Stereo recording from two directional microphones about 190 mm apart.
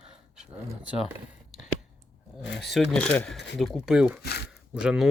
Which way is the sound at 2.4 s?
65° left (ahead or behind).